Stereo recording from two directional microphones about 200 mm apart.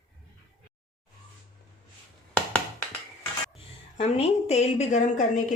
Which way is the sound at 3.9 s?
30° left (ahead or behind).